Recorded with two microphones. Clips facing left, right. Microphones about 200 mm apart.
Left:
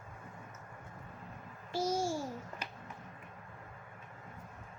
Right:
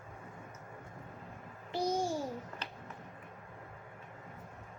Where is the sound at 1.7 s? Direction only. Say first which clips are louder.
Even; 15° right (ahead or behind).